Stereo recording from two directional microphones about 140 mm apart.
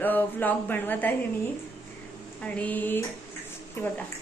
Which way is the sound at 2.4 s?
10° left (ahead or behind).